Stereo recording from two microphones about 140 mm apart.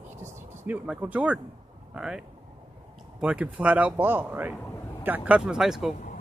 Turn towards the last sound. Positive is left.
turn(degrees=-5)  # may be behind; listen again after turning